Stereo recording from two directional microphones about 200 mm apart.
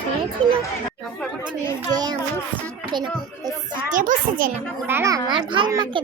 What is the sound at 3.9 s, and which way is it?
Speech, 40° right (ahead or behind).